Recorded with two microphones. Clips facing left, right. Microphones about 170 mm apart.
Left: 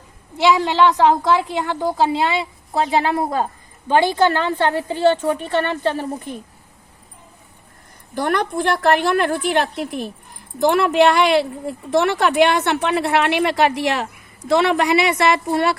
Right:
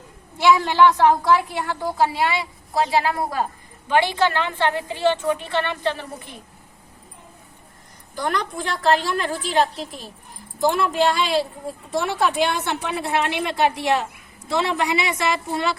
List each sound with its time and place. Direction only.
0.4 s a woman's voice: 20° left (ahead or behind)
3.8 s a woman's voice: 35° left (ahead or behind)
8.1 s a woman's voice: 60° left (ahead or behind)